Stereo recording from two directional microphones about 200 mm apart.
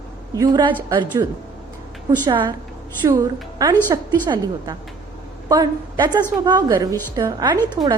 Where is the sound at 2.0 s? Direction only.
20° right (ahead or behind).